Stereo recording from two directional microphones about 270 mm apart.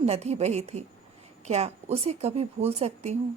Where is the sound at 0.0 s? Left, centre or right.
Right.